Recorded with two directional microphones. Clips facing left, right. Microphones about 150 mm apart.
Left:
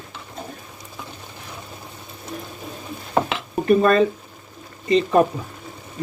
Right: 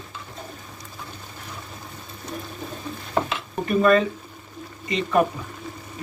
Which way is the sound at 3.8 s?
35° left (ahead or behind).